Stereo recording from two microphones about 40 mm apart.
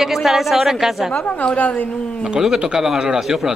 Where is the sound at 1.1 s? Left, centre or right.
Left.